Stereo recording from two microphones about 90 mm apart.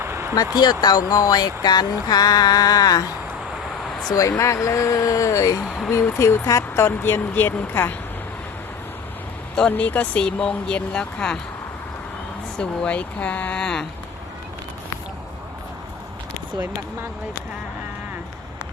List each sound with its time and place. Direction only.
0.0 s a sound: 30° right (ahead or behind)
0.3 s speech: 45° left (ahead or behind)
4.4 s speech: 35° left (ahead or behind)
5.6 s speech: 5° left (ahead or behind)
5.9 s speech: 30° left (ahead or behind)
9.6 s speech: 10° left (ahead or behind)
12.5 s speech: 10° left (ahead or behind)